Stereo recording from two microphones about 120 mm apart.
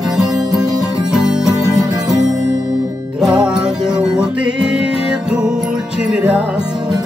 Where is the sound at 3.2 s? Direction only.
5° right (ahead or behind).